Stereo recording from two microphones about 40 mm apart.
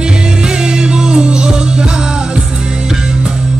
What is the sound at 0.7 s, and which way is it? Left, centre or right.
Music, centre.